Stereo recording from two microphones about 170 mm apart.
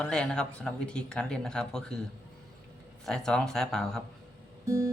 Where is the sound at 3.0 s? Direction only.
5° left (ahead or behind).